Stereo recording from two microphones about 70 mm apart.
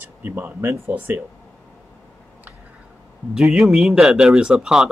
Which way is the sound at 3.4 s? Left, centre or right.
Centre.